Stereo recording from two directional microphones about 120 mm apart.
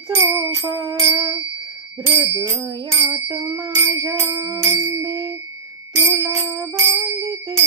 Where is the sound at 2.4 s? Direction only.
25° right (ahead or behind).